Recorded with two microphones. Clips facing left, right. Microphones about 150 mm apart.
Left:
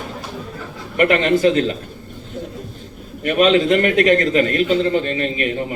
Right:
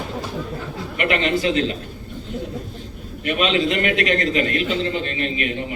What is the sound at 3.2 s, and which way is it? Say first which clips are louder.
A man's voice: left 6 dB; 45° left (ahead or behind).